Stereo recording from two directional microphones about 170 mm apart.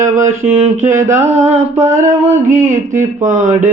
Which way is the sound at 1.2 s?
40° right (ahead or behind).